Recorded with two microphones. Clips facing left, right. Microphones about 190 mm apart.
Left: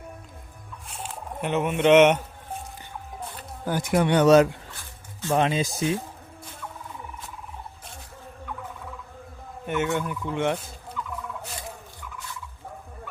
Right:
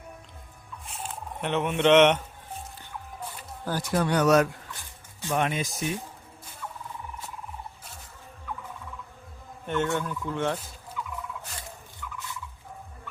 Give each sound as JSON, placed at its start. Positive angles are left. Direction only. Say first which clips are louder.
{"t": 1.0, "sound": "speech", "louder": "left 2 dB", "side_deg": 5}
{"t": 3.7, "sound": "speech", "louder": "left 4 dB", "side_deg": 15}
{"t": 9.6, "sound": "fowl", "louder": "left 1 dB", "side_deg": 10}
{"t": 11.0, "sound": "fowl", "louder": "left 2 dB", "side_deg": -10}